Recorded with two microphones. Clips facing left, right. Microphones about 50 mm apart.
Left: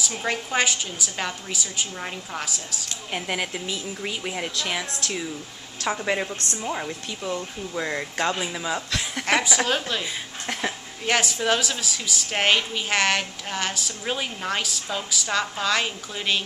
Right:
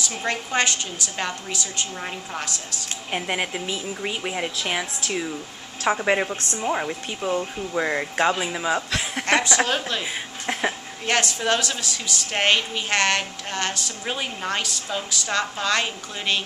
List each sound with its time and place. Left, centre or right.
0.1 s a woman's voice: centre
3.1 s a woman's voice: centre
9.2 s a woman's voice: centre
10.4 s a sound: centre
11.1 s a woman's voice: centre